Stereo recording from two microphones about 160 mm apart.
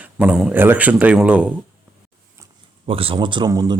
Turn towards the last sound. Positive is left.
turn(degrees=-25)  # may be behind; listen again after turning